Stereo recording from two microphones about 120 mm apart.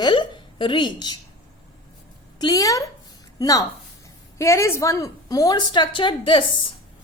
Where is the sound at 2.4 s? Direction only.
30° left (ahead or behind).